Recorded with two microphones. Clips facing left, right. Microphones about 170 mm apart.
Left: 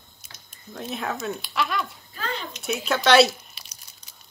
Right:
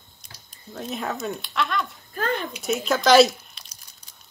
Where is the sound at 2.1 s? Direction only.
50° right (ahead or behind).